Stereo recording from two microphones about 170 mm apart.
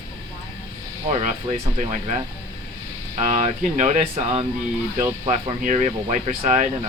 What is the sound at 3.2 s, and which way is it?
Speech, 40° right (ahead or behind).